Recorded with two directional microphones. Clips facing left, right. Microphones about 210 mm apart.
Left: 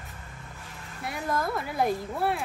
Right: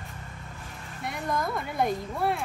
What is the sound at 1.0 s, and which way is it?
Speech, 5° left (ahead or behind).